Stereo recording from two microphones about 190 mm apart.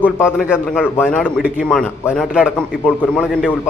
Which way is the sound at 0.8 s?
10° left (ahead or behind).